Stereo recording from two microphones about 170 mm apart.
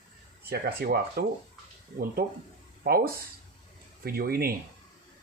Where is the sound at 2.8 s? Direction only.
60° right (ahead or behind).